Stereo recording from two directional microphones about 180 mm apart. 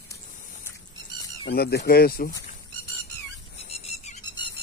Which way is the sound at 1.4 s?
65° left (ahead or behind).